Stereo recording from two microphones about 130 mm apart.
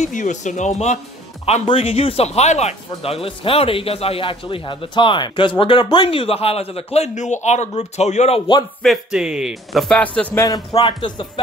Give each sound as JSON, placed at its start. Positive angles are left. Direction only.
{"t": 0.0, "sound": "speech", "side_deg": 70}
{"t": 1.4, "sound": "speech", "side_deg": 50}
{"t": 8.8, "sound": "a man's voice", "side_deg": -5}
{"t": 10.3, "sound": "speech", "side_deg": 30}